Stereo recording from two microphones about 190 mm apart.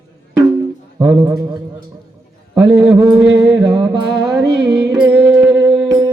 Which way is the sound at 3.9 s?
20° right (ahead or behind).